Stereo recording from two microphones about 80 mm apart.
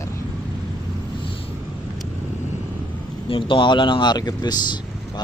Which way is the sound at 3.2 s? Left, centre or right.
Left.